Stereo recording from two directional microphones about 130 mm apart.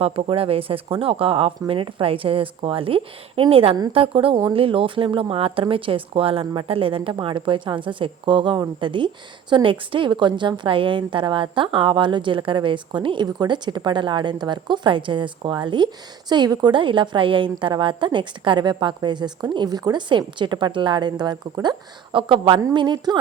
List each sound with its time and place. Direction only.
0.0 s a woman's voice: 50° right (ahead or behind)